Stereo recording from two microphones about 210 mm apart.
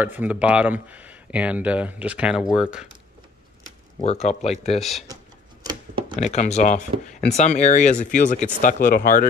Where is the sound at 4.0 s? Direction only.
30° left (ahead or behind).